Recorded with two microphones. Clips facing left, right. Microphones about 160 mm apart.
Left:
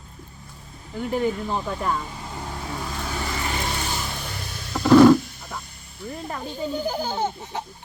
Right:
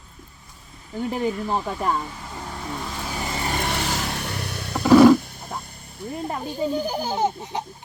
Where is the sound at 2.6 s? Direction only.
Centre (ahead or behind).